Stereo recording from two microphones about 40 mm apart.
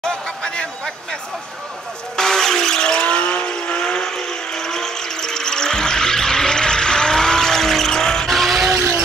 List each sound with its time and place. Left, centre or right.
0.0 s chatter: centre
2.1 s vehicle: centre
8.3 s vehicle: centre